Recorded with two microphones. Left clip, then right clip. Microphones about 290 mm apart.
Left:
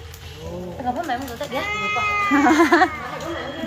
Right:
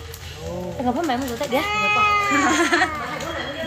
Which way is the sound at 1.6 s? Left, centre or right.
Centre.